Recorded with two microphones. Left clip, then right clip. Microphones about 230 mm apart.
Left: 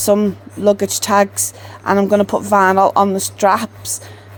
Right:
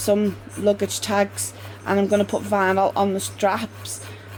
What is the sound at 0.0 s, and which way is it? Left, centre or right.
Speech, left.